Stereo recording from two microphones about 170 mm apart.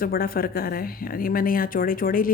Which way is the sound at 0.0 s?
60° left (ahead or behind).